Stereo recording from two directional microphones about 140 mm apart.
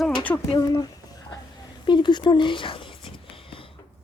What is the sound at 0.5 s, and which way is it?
Speech, 25° left (ahead or behind).